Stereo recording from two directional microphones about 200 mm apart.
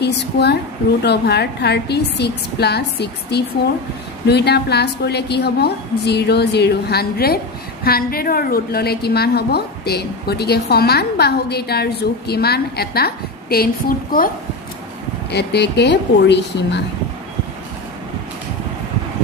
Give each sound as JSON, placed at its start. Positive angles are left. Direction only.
{"t": 0.0, "sound": "a woman's voice", "side_deg": 55}
{"t": 15.3, "sound": "a woman's voice", "side_deg": 55}